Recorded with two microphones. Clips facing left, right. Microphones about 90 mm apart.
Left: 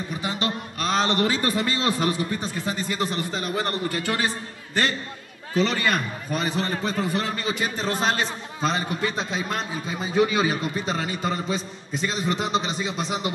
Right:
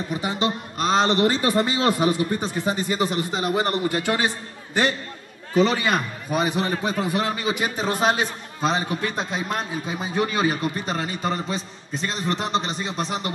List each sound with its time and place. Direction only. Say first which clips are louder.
0.4 s a man's voice: right 3 dB; 20° right (ahead or behind)
2.0 s a man's voice: right 3 dB; 20° right (ahead or behind)
5.5 s a man's voice: right 3 dB; 10° right (ahead or behind); by 13.3 s 5° left (ahead or behind)